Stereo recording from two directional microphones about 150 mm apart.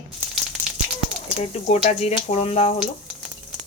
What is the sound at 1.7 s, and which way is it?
Speech, 45° left (ahead or behind).